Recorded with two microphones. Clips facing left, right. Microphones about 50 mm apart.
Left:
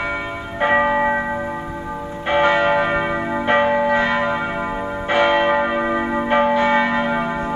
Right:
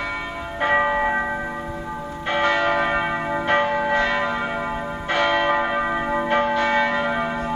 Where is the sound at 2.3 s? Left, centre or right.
Centre.